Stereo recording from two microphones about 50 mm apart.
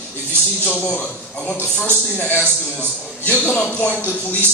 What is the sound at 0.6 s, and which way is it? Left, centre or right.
Speech, left.